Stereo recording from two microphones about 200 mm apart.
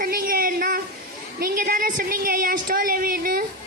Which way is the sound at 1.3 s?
45° right (ahead or behind).